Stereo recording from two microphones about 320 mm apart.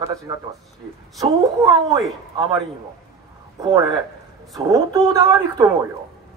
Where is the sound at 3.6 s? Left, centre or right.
Centre.